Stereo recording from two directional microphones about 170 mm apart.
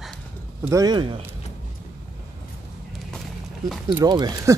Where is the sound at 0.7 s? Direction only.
20° right (ahead or behind).